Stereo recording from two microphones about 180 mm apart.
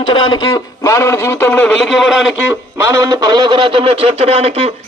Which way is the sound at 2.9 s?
20° right (ahead or behind).